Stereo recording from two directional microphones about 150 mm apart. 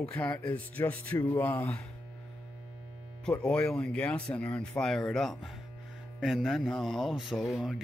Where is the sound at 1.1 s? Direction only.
20° left (ahead or behind).